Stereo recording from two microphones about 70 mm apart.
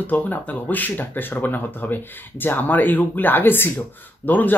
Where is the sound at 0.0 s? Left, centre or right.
Left.